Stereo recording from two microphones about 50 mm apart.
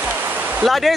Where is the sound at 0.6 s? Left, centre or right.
Centre.